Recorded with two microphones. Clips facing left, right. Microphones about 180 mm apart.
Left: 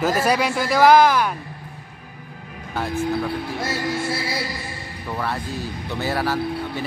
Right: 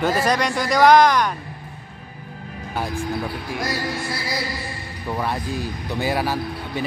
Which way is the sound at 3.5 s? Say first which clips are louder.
Left 1 dB; 25° left (ahead or behind).